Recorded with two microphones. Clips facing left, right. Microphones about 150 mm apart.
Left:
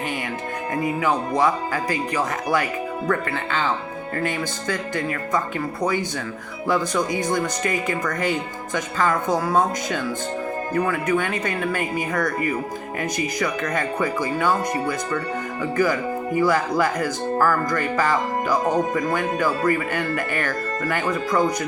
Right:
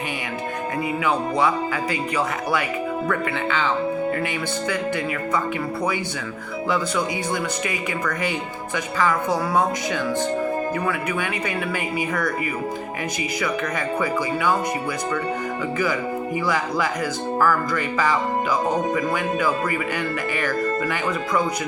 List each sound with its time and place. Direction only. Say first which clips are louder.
1.7 s speech: even; 40° left (ahead or behind)
4.7 s speech: left 1 dB; 45° left (ahead or behind)
6.7 s speech: left 2 dB; 45° left (ahead or behind)
10.8 s speech: left 3 dB; 45° left (ahead or behind)
13.4 s speech: even; 50° left (ahead or behind)